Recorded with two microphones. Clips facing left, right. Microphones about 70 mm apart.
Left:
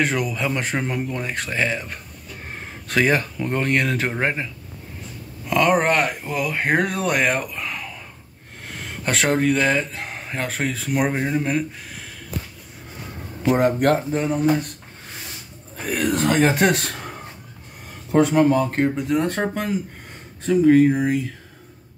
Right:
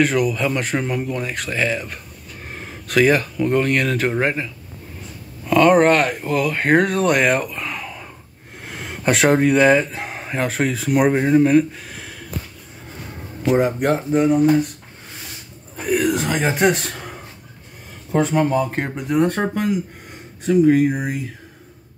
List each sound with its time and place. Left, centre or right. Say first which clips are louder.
0.0 s speech: right 4 dB; left
5.5 s speech: right 5 dB; centre
9.0 s speech: right 4 dB; centre
13.4 s speech: even; centre
15.9 s a sound: right 1 dB; centre
18.1 s speech: left 2 dB; centre
18.8 s speech: right 1 dB; centre
20.4 s speech: even; centre